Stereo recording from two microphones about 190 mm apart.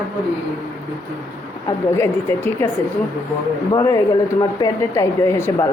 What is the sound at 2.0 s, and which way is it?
Speech, 15° left (ahead or behind).